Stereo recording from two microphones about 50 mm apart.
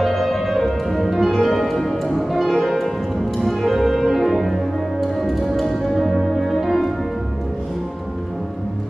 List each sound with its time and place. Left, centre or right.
0.0 s music: centre